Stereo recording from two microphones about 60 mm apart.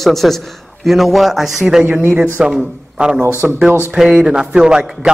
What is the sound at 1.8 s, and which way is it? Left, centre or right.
Speech, right.